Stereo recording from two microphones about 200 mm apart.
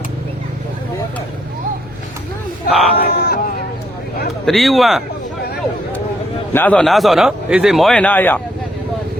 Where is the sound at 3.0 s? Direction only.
50° left (ahead or behind).